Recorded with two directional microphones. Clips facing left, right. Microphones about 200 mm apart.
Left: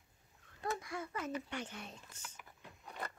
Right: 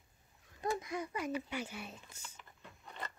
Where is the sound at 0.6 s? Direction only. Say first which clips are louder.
Right 3 dB; 20° right (ahead or behind).